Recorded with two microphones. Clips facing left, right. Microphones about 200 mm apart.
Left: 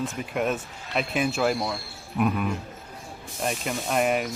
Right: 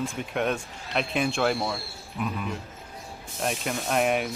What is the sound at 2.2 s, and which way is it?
Speech, 60° left (ahead or behind).